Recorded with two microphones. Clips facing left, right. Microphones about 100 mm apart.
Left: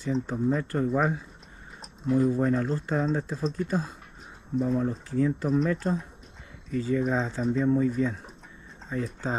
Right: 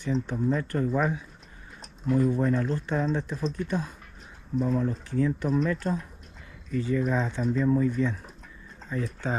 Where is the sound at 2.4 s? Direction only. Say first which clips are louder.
Left 1 dB; 35° left (ahead or behind).